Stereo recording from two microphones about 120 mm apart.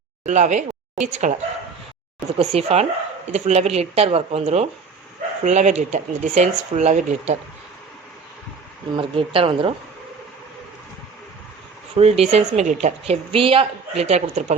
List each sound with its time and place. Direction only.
0.3 s speech: 90° right
2.4 s speech: 60° right (ahead or behind)
5.4 s speech: 85° right
9.0 s speech: 50° right (ahead or behind)
11.9 s speech: 60° right (ahead or behind)
13.3 s speech: 50° right (ahead or behind); by 14.5 s 70° right (ahead or behind)